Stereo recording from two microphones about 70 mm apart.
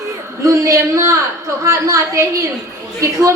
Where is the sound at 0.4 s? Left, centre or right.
Right.